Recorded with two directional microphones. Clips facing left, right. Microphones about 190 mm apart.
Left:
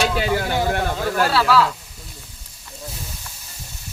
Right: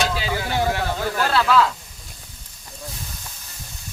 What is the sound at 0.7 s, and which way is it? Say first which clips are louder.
Speech: left 2 dB; 45° left (ahead or behind).